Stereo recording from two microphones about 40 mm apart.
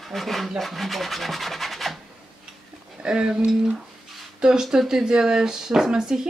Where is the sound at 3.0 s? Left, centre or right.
Right.